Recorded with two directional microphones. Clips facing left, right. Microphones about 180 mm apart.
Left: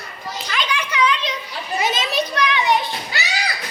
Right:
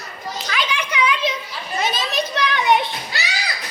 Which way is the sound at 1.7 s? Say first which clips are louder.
Left 1 dB; 15° left (ahead or behind).